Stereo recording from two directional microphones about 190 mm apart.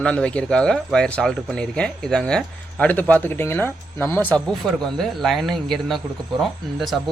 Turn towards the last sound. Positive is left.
turn(degrees=0)  # may be behind; listen again after turning